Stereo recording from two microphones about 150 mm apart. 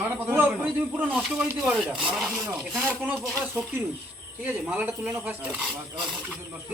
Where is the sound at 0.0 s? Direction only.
15° right (ahead or behind).